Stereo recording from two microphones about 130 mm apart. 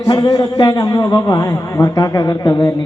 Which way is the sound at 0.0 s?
30° left (ahead or behind).